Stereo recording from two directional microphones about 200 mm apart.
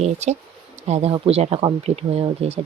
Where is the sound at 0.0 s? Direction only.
35° right (ahead or behind).